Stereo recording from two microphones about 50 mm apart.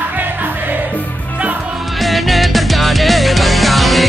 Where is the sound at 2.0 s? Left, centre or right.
Centre.